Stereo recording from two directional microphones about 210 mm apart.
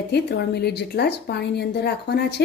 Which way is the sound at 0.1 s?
50° left (ahead or behind).